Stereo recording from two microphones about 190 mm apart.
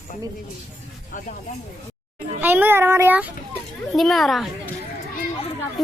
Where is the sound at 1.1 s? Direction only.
45° left (ahead or behind).